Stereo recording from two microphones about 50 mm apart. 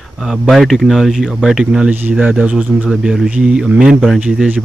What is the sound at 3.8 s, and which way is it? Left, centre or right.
Speech, centre.